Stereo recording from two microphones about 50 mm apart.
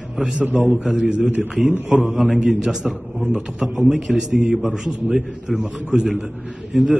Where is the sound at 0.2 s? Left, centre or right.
Right.